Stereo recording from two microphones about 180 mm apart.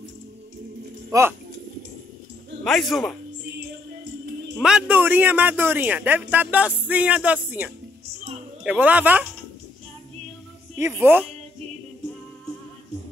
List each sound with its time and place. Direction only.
1.1 s speech: 20° right (ahead or behind)
2.6 s speech: centre (ahead or behind)
4.6 s speech: 5° right (ahead or behind)
10.8 s speech: 15° right (ahead or behind)